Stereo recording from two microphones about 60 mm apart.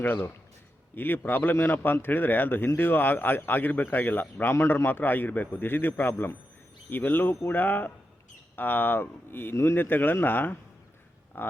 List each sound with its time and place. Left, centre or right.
0.0 s a man's voice: left
4.5 s a man's voice: left